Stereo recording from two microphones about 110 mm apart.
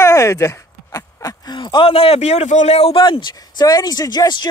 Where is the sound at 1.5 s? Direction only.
45° left (ahead or behind); by 3.0 s 65° left (ahead or behind).